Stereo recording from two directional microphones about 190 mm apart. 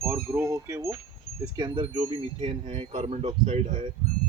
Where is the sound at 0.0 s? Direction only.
15° right (ahead or behind).